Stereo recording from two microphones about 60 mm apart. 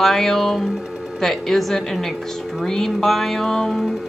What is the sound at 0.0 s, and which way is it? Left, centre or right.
Speech, centre.